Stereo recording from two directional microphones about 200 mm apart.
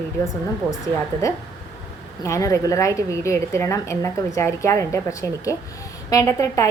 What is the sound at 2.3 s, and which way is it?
A woman's voice, 15° left (ahead or behind).